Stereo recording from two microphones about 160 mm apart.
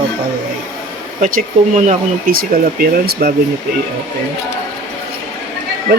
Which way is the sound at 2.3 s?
70° right (ahead or behind).